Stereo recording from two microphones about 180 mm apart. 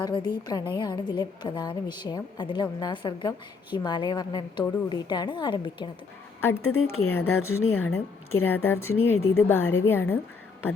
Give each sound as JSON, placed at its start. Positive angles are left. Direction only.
{"t": 0.0, "sound": "a woman's voice", "side_deg": 25}
{"t": 6.4, "sound": "a woman's voice", "side_deg": 15}